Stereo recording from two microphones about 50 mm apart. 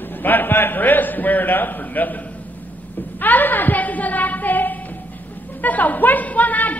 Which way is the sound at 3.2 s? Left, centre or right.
Left.